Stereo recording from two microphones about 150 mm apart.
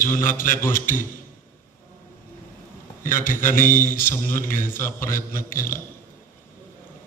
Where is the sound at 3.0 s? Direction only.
65° left (ahead or behind).